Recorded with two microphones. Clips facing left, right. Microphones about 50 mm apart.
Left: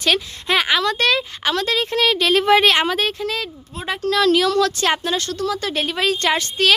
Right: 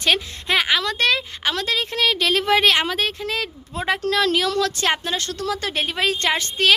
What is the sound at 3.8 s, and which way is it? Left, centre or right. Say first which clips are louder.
Speech: right 2 dB; right.